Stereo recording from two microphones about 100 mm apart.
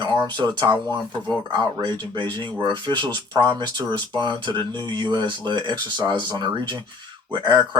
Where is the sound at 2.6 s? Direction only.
50° right (ahead or behind).